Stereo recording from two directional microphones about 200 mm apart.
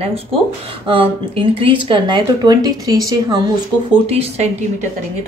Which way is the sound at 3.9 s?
30° right (ahead or behind).